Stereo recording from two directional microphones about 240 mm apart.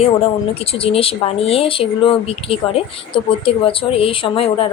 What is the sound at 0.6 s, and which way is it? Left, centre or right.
Speech, left.